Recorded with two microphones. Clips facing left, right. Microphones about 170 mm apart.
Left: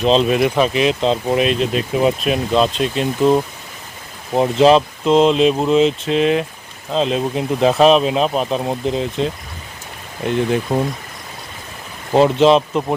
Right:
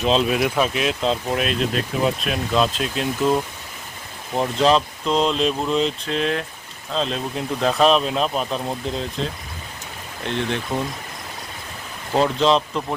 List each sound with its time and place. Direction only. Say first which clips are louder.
0.0 s speech: left 5 dB; centre (ahead or behind)
4.5 s speech: left 6 dB; 5° left (ahead or behind)
8.3 s speech: left 5 dB; 35° left (ahead or behind)
8.5 s speech: left 6 dB; 5° left (ahead or behind)
12.2 s speech: left 6 dB; 5° left (ahead or behind)